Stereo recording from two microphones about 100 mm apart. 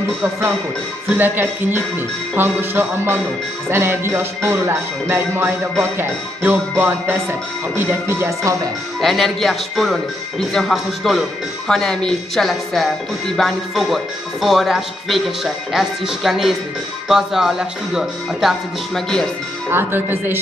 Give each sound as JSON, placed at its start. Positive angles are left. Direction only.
{"t": 1.1, "sound": "music", "side_deg": -20}
{"t": 9.0, "sound": "speech", "side_deg": 0}
{"t": 19.7, "sound": "music", "side_deg": -20}